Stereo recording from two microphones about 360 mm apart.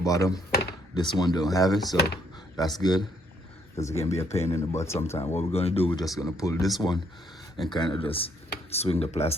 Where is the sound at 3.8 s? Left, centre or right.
Centre.